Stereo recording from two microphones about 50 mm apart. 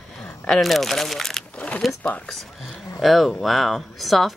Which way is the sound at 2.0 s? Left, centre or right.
Left.